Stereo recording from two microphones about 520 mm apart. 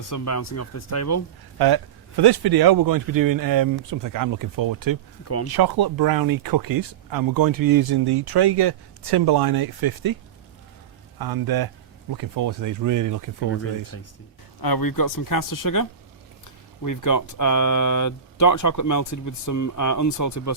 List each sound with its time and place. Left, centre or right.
0.1 s speech: left
1.5 s speech: right
11.2 s speech: right
13.5 s speech: left
14.6 s speech: left